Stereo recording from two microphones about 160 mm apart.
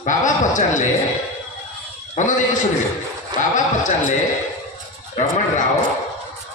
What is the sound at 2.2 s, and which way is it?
Speech, 50° left (ahead or behind).